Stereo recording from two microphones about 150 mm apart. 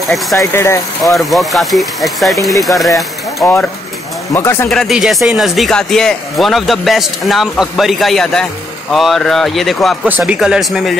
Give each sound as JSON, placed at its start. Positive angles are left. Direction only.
{"t": 0.4, "sound": "speech", "side_deg": 15}
{"t": 1.0, "sound": "speech", "side_deg": 0}
{"t": 4.3, "sound": "speech", "side_deg": 15}
{"t": 4.6, "sound": "speech", "side_deg": 0}
{"t": 10.0, "sound": "speech", "side_deg": -10}